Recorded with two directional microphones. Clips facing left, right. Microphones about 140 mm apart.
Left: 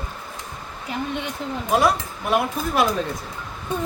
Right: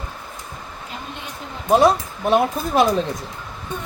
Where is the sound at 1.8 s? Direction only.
25° right (ahead or behind).